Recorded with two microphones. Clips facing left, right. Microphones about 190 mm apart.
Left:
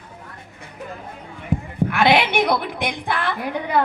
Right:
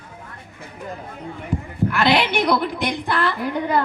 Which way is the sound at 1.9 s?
60° left (ahead or behind).